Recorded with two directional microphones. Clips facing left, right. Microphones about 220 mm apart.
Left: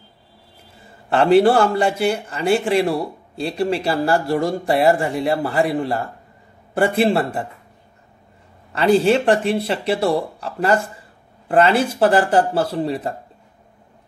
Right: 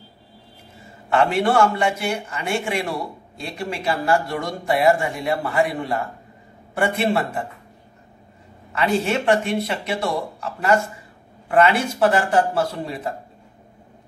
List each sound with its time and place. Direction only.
1.1 s speech: 30° left (ahead or behind)
8.7 s speech: 35° left (ahead or behind)